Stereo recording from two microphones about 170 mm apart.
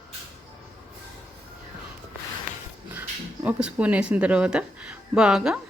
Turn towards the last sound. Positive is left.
turn(degrees=-5)  # may be behind; listen again after turning